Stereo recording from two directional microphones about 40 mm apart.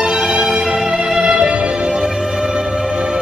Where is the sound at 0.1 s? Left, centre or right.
Centre.